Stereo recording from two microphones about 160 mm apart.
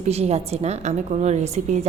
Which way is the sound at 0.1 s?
40° right (ahead or behind).